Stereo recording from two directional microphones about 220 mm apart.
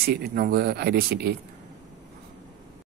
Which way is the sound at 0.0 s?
45° right (ahead or behind).